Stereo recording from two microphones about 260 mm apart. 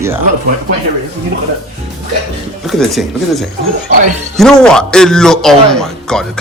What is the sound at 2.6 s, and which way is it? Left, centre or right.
A man's voice, centre.